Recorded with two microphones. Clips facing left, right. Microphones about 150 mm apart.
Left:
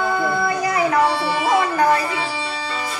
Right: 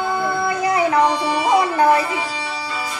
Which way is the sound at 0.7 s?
20° right (ahead or behind).